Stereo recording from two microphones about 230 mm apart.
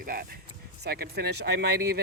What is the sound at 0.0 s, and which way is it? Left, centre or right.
Speech, right.